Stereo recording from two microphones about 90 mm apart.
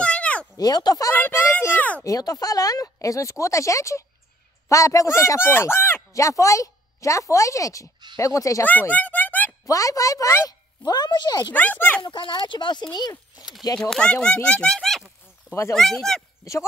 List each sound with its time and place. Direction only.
0.0 s a sound: 15° left (ahead or behind)
0.6 s speech: 45° left (ahead or behind)
1.1 s a child's voice: 25° left (ahead or behind)
2.0 s speech: 40° left (ahead or behind); by 6.0 s 25° left (ahead or behind)
6.1 s speech: 35° left (ahead or behind)
8.6 s speech: 20° left (ahead or behind)
9.7 s speech: 40° left (ahead or behind)
11.5 s a child's voice: 20° left (ahead or behind)
12.0 s speech: 65° left (ahead or behind)
12.9 s speech: 45° left (ahead or behind)
13.7 s speech: 5° left (ahead or behind)